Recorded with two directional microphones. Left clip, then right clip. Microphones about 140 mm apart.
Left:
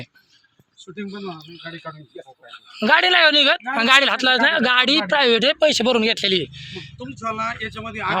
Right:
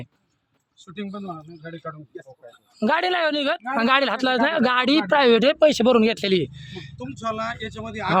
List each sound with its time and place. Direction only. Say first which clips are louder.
1.0 s speech: left 2 dB; 30° right (ahead or behind)
1.5 s speech: left 1 dB; 15° right (ahead or behind)
3.8 s speech: left 4 dB; 40° right (ahead or behind); by 6.9 s 70° right (ahead or behind)
7.2 s speech: left 2 dB; 15° right (ahead or behind)